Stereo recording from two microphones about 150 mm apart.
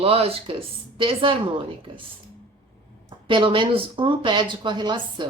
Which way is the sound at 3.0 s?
35° right (ahead or behind).